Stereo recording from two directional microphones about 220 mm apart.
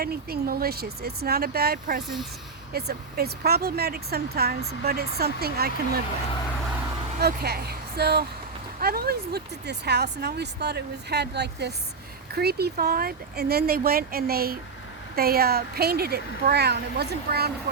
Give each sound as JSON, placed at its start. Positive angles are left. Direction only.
{"t": 0.0, "sound": "speech", "side_deg": -45}
{"t": 7.2, "sound": "speech", "side_deg": -45}